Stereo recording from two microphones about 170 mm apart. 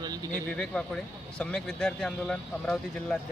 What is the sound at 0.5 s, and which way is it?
Speech, 5° left (ahead or behind).